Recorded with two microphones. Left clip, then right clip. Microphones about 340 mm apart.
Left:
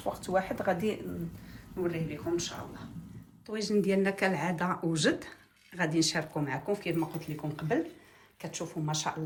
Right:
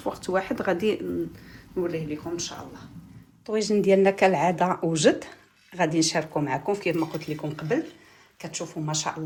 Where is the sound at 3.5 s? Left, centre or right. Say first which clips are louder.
Right 8 dB; centre.